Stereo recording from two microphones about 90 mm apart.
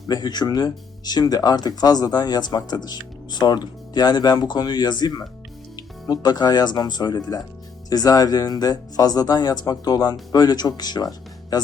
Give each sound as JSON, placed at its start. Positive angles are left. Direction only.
{"t": 0.1, "sound": "speech", "side_deg": 50}